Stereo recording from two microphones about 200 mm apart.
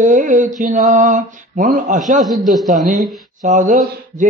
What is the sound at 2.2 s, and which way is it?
Speech, centre (ahead or behind).